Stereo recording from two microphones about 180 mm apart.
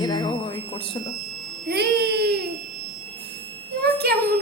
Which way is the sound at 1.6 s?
65° right (ahead or behind).